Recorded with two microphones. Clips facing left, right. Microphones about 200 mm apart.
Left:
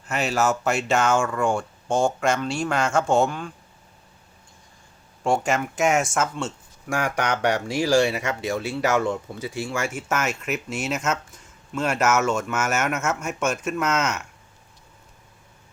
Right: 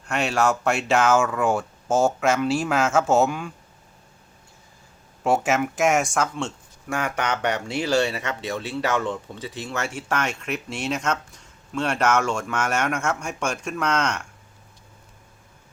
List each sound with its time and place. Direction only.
0.0 s speech: centre (ahead or behind)
5.2 s speech: 5° right (ahead or behind)